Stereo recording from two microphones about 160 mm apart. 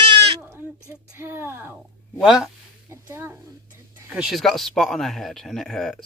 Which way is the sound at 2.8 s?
15° right (ahead or behind).